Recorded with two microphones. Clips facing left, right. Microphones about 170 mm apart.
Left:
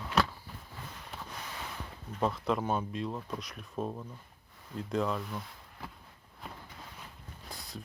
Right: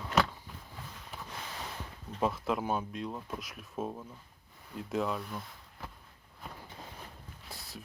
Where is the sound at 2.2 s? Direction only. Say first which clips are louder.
Left 1 dB; 5° right (ahead or behind).